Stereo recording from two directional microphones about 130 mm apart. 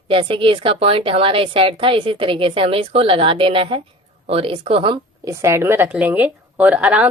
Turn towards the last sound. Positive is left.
turn(degrees=-10)  # may be behind; listen again after turning